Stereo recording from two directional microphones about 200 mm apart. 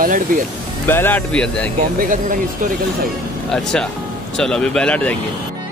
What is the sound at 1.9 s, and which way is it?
Speech, 45° right (ahead or behind).